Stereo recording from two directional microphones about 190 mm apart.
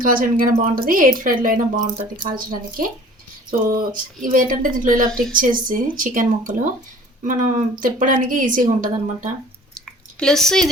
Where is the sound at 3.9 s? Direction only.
45° right (ahead or behind).